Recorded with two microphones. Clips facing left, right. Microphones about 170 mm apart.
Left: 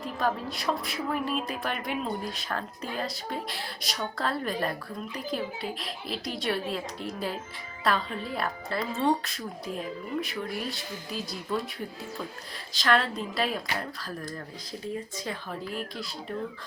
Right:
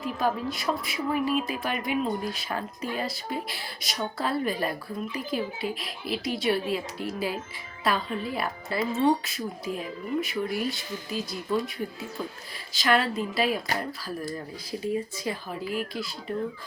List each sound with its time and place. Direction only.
0.0 s speech: 5° right (ahead or behind)
12.7 s speech: 5° right (ahead or behind)